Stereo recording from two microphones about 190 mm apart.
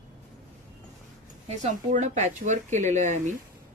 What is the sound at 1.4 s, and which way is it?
A woman's voice, 40° right (ahead or behind).